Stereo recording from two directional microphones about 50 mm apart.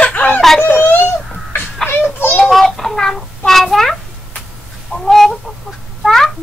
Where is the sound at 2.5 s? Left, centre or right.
Centre.